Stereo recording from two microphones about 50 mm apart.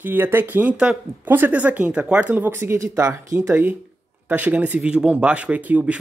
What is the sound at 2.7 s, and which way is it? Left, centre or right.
Speech, right.